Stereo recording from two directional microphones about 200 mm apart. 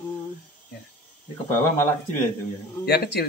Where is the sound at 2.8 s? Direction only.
55° left (ahead or behind).